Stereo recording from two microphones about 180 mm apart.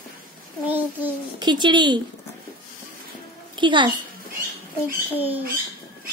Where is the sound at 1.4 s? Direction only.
25° right (ahead or behind).